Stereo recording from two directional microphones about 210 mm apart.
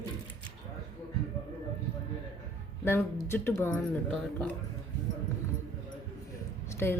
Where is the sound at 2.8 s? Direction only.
10° left (ahead or behind).